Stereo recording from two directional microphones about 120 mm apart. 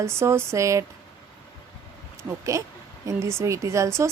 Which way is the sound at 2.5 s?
25° right (ahead or behind).